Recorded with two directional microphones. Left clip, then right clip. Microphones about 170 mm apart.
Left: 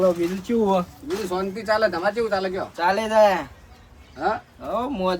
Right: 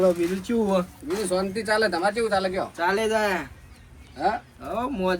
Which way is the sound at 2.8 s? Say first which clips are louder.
Left 4 dB; 20° left (ahead or behind).